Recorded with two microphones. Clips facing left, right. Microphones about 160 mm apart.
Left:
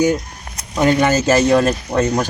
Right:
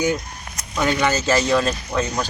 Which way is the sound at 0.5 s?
35° left (ahead or behind).